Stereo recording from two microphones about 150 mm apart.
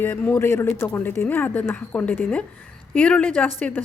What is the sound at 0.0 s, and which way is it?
Speech, 15° left (ahead or behind).